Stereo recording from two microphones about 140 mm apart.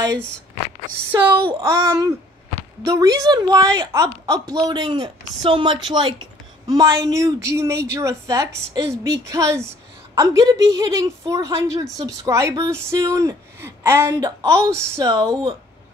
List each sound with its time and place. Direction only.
1.1 s speech: 35° right (ahead or behind)
1.6 s a woman's voice: 25° right (ahead or behind)